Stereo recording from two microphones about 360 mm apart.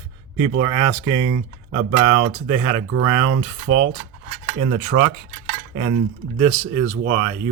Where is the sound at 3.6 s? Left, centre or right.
Right.